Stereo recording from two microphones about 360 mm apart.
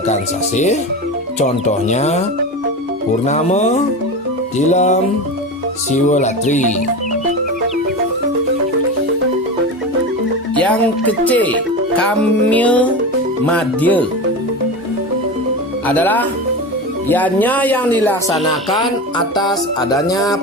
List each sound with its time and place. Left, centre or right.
0.1 s speech: centre
3.2 s speech: centre
10.5 s speech: centre
15.9 s speech: centre
19.4 s music: centre